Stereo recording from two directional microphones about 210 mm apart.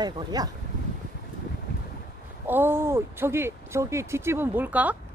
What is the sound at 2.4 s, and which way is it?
Speech, 10° right (ahead or behind).